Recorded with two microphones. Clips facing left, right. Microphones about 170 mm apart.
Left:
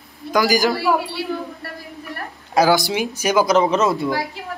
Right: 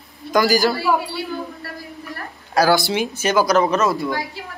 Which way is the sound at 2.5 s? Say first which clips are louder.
Even; 15° left (ahead or behind).